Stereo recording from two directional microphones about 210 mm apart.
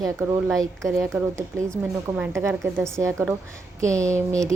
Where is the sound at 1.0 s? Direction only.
Centre (ahead or behind).